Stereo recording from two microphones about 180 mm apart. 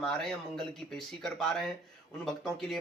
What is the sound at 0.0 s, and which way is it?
A man's voice, 5° left (ahead or behind).